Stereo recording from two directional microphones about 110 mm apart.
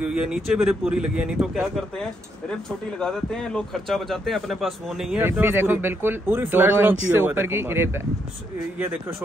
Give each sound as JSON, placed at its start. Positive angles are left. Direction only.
{"t": 0.0, "sound": "a man's voice", "side_deg": -10}
{"t": 3.0, "sound": "a man's voice", "side_deg": 5}
{"t": 5.2, "sound": "speech", "side_deg": -20}